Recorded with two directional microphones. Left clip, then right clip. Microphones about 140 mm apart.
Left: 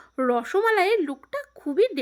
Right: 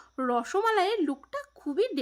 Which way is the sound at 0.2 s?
30° left (ahead or behind).